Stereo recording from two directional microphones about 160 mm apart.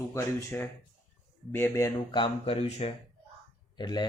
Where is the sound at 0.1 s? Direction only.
10° left (ahead or behind).